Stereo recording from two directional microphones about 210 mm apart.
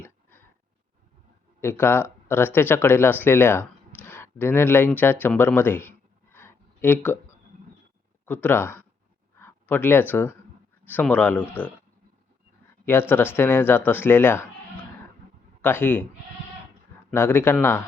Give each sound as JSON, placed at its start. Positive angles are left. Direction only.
{"t": 0.0, "sound": "a sound", "side_deg": 10}
{"t": 1.6, "sound": "speech", "side_deg": 10}
{"t": 6.3, "sound": "a sound", "side_deg": 10}
{"t": 8.2, "sound": "speech", "side_deg": 10}
{"t": 12.8, "sound": "speech", "side_deg": 10}
{"t": 15.6, "sound": "speech", "side_deg": 10}
{"t": 17.1, "sound": "speech", "side_deg": 10}